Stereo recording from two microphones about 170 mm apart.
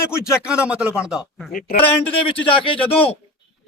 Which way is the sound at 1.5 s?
55° left (ahead or behind).